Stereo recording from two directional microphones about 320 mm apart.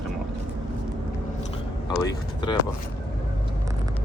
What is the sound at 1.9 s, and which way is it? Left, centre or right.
Speech, centre.